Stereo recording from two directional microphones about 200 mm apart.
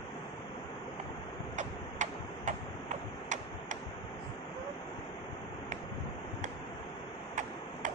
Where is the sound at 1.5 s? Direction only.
35° right (ahead or behind).